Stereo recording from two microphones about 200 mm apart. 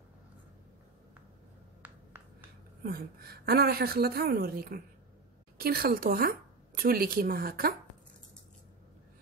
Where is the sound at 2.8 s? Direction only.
50° right (ahead or behind).